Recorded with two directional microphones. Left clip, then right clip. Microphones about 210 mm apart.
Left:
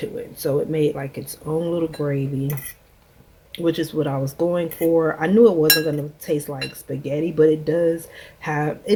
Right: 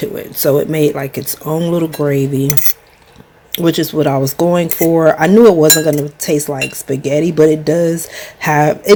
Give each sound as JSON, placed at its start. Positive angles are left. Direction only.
{"t": 0.0, "sound": "speech", "side_deg": -25}
{"t": 3.5, "sound": "speech", "side_deg": -30}